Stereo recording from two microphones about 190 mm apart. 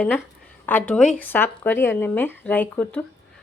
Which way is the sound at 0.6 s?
10° left (ahead or behind).